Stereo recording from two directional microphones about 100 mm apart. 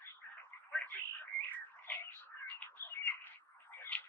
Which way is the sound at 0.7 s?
15° left (ahead or behind).